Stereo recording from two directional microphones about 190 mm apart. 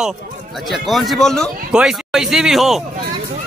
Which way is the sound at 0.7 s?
Centre (ahead or behind).